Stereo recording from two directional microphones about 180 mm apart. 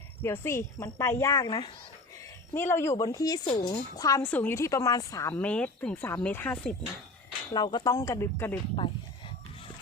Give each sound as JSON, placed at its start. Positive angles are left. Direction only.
{"t": 0.2, "sound": "speech", "side_deg": 15}
{"t": 5.3, "sound": "speech", "side_deg": 5}
{"t": 7.5, "sound": "speech", "side_deg": 25}